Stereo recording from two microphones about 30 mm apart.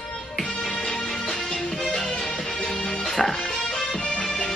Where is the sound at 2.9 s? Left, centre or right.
Centre.